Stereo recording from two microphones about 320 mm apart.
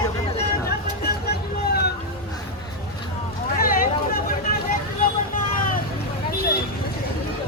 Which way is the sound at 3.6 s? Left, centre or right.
Left.